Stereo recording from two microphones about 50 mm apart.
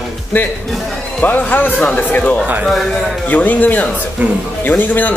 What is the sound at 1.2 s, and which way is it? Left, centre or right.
Speech, left.